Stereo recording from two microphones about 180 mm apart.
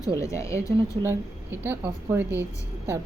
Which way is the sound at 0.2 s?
15° left (ahead or behind).